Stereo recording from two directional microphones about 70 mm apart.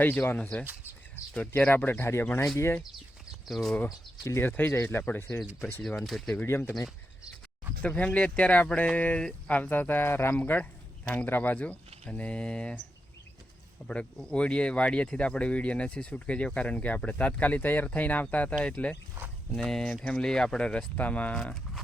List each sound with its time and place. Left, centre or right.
0.0 s speech: left
0.3 s speech: centre; by 2.2 s left
3.4 s speech: centre
4.4 s speech: left
6.1 s speech: centre
6.3 s speech: left
7.8 s speech: centre
9.6 s speech: left
10.3 s speech: left
13.8 s speech: centre
19.5 s speech: centre; by 21.5 s left